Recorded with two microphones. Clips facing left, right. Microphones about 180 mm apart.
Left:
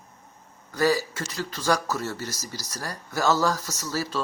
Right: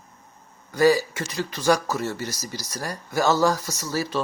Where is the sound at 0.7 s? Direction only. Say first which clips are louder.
Right 5 dB; 15° right (ahead or behind).